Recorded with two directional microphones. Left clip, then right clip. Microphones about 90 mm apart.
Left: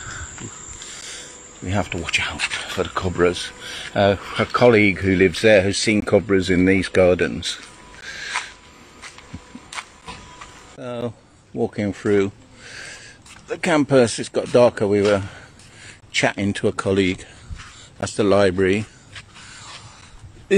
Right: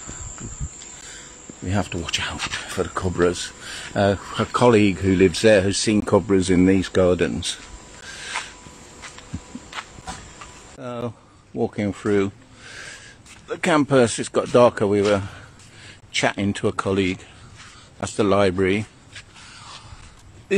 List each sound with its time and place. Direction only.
1.7 s speech: 45° right (ahead or behind)
2.6 s speech: 20° right (ahead or behind)
2.9 s speech: 35° right (ahead or behind)
6.7 s speech: 5° right (ahead or behind)
8.0 s owl: 20° right (ahead or behind)
10.8 s speech: 20° left (ahead or behind)
12.0 s a sound: 20° left (ahead or behind)
13.5 s a man's voice: 20° left (ahead or behind)
14.0 s speech: 5° left (ahead or behind)
14.6 s a man's voice: 15° left (ahead or behind)
16.7 s speech: 35° left (ahead or behind)